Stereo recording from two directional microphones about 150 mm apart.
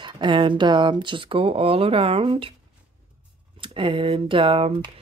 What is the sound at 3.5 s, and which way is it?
Speech, 35° right (ahead or behind).